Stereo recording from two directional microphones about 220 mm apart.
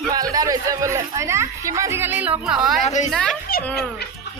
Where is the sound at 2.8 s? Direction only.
30° left (ahead or behind).